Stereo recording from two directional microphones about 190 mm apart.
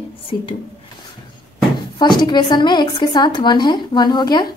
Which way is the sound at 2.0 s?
25° left (ahead or behind).